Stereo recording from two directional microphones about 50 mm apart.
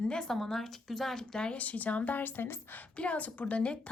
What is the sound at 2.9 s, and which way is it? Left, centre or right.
Speech, left.